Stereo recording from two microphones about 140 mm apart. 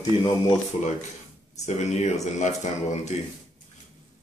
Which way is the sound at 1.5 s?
55° left (ahead or behind).